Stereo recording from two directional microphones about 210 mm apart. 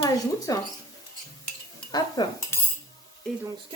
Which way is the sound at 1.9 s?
20° left (ahead or behind).